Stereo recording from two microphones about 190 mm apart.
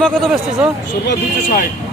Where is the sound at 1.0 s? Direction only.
60° left (ahead or behind).